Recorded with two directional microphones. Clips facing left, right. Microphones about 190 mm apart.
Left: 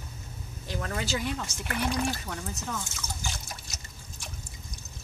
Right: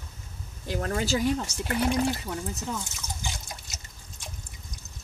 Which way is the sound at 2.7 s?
15° right (ahead or behind).